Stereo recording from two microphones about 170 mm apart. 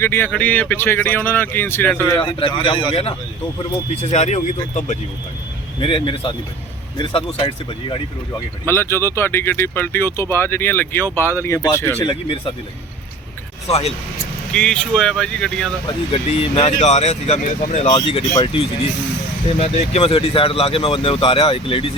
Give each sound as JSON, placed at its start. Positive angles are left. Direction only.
{"t": 0.0, "sound": "speech", "side_deg": 15}
{"t": 2.1, "sound": "speech", "side_deg": 30}
{"t": 5.8, "sound": "speech", "side_deg": 30}
{"t": 8.6, "sound": "speech", "side_deg": 15}
{"t": 13.7, "sound": "speech", "side_deg": 35}
{"t": 14.5, "sound": "speech", "side_deg": 5}
{"t": 15.9, "sound": "speech", "side_deg": 35}